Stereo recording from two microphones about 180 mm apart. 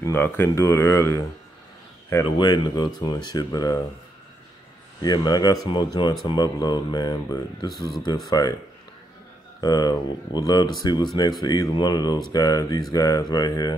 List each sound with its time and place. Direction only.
0.0 s speech: 15° left (ahead or behind)
2.3 s speech: 25° left (ahead or behind)
5.0 s speech: 20° left (ahead or behind)
9.6 s speech: 20° left (ahead or behind)